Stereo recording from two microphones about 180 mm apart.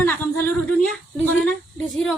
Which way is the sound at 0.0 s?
10° left (ahead or behind).